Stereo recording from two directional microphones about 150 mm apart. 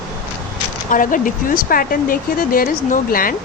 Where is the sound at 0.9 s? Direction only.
65° left (ahead or behind).